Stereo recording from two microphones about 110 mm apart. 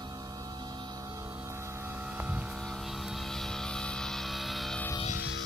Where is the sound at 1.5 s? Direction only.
25° right (ahead or behind).